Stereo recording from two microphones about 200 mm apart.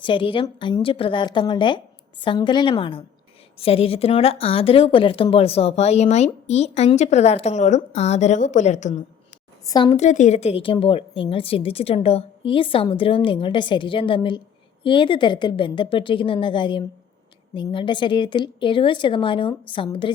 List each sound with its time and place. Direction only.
0.0 s a woman's voice: 25° left (ahead or behind)
9.6 s a woman's voice: 25° left (ahead or behind)